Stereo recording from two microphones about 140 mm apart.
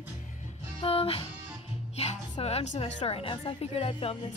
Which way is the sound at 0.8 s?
40° left (ahead or behind).